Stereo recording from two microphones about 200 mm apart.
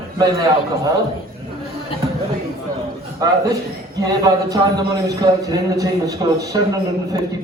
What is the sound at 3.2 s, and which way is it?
A man's voice, 20° right (ahead or behind).